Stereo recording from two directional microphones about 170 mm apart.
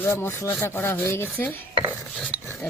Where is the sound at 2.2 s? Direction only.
10° left (ahead or behind).